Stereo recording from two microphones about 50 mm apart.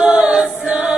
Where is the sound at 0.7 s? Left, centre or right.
Centre.